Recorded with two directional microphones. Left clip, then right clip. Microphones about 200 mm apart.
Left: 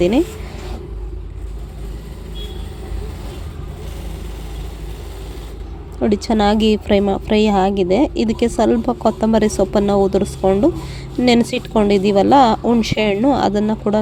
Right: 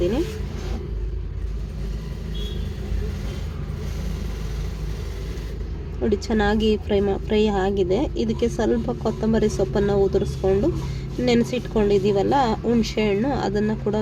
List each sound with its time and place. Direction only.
6.0 s a woman's voice: 30° left (ahead or behind)